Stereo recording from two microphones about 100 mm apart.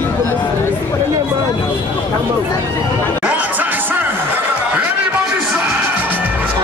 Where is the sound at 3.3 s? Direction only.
15° right (ahead or behind).